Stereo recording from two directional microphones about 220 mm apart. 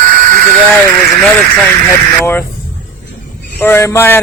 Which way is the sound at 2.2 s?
10° left (ahead or behind).